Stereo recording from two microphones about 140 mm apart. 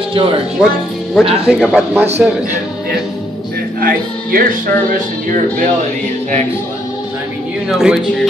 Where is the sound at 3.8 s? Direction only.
85° right.